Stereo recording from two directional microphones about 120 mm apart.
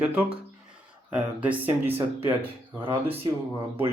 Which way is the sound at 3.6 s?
20° right (ahead or behind).